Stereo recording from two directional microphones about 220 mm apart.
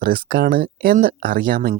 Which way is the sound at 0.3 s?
45° right (ahead or behind).